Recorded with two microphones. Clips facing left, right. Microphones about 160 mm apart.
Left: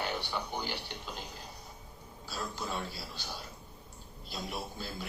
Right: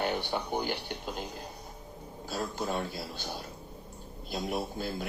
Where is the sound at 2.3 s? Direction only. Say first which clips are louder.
Right 5 dB; 50° right (ahead or behind).